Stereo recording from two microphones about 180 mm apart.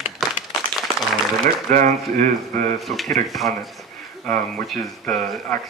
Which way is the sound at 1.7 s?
50° right (ahead or behind).